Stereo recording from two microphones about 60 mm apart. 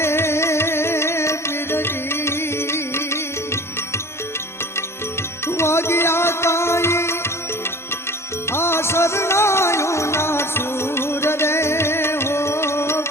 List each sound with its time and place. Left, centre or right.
0.0 s music: left
5.5 s music: left
8.4 s music: left